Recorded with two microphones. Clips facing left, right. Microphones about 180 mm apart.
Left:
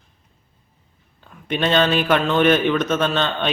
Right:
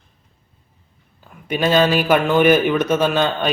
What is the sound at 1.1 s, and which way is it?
A man's voice, 5° right (ahead or behind).